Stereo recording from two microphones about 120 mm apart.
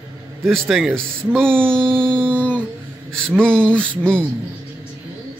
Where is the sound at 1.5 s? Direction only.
15° right (ahead or behind).